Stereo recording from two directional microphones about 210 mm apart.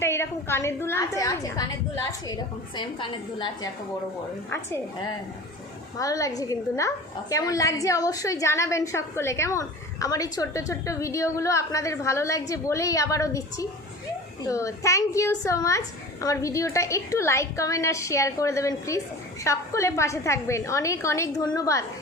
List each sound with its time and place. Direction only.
0.0 s a woman's voice: 10° left (ahead or behind)
2.7 s a woman's voice: 20° left (ahead or behind)
6.0 s a woman's voice: 15° left (ahead or behind)